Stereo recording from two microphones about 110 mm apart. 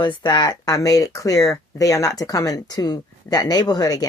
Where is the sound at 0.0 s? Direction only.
45° left (ahead or behind).